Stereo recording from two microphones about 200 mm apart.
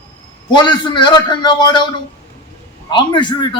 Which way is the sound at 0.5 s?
25° left (ahead or behind).